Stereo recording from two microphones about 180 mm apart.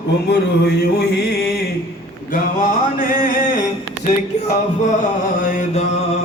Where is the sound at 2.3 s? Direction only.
50° left (ahead or behind).